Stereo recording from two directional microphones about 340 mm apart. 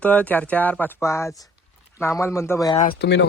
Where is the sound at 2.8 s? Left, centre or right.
Left.